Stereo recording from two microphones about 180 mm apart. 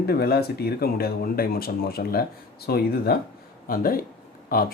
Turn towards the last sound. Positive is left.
turn(degrees=55)  # may be behind; listen again after turning